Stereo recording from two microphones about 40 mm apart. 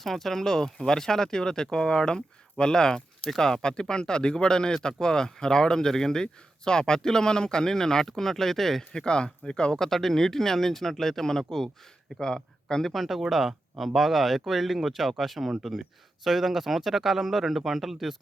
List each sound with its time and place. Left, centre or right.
0.0 s speech: centre
8.9 s speech: left
9.7 s a man's voice: centre
12.9 s speech: centre